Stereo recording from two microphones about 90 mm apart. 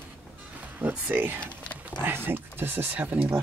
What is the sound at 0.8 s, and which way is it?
Speech, 20° right (ahead or behind).